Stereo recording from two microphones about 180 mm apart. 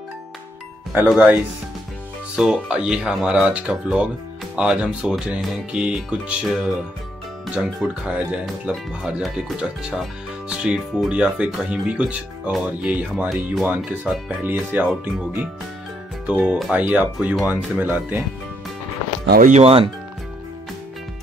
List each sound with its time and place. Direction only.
0.9 s speech: 5° right (ahead or behind)
19.4 s speech: 35° right (ahead or behind)